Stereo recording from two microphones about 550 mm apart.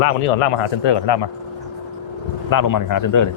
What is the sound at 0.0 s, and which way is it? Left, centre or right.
Speech, left.